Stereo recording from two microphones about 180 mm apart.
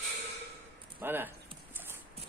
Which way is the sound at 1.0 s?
10° right (ahead or behind).